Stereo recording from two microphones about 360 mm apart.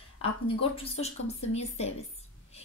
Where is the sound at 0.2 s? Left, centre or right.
Centre.